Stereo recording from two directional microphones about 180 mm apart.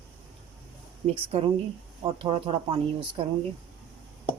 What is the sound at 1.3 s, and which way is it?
Speech, 35° right (ahead or behind).